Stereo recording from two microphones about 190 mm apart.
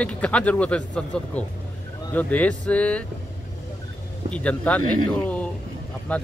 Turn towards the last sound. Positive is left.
turn(degrees=5)  # may be behind; listen again after turning